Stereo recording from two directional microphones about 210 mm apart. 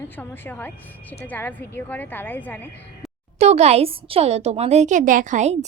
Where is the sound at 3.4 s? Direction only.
30° right (ahead or behind).